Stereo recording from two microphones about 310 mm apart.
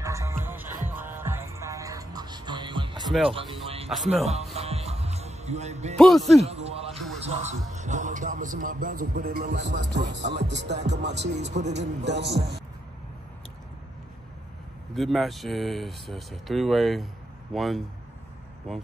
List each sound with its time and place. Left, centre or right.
0.0 s music: centre
4.1 s a man's voice: right
4.6 s music: centre
5.9 s speech: centre
6.4 s a man's voice: centre
11.4 s a man's voice: right
11.8 s speech: right
15.0 s speech: centre